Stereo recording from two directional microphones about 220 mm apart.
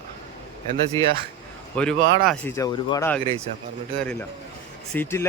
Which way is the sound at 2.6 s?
20° left (ahead or behind).